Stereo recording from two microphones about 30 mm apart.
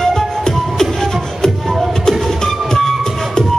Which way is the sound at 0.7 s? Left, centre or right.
Centre.